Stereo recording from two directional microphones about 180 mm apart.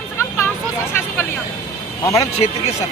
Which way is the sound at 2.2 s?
35° left (ahead or behind).